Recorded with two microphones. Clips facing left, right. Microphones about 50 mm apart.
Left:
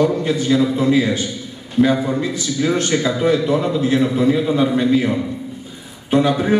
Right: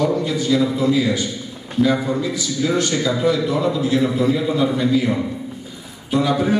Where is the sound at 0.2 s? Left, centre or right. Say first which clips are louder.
Left 2 dB; left.